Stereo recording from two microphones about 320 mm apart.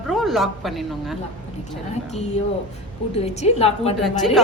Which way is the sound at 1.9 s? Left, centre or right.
Left.